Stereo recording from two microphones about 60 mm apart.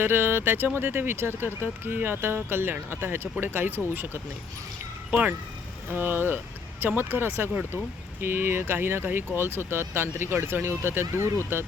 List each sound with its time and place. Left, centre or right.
0.0 s speech: right
5.9 s speech: right